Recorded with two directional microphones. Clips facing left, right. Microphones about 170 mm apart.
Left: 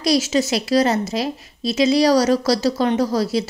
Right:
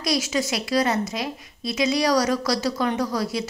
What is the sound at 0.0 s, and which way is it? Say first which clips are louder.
A woman's voice: left 6 dB; 30° left (ahead or behind).